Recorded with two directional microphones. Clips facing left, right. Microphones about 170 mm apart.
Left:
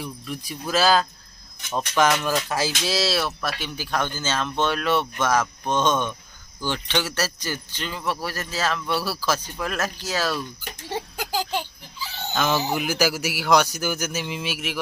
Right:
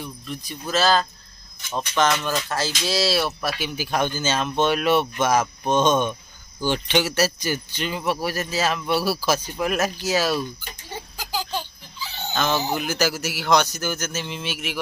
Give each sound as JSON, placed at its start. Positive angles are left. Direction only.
{"t": 0.0, "sound": "speech", "side_deg": 5}
{"t": 2.8, "sound": "speech", "side_deg": 0}
{"t": 10.8, "sound": "a sound", "side_deg": 75}
{"t": 11.9, "sound": "speech", "side_deg": 5}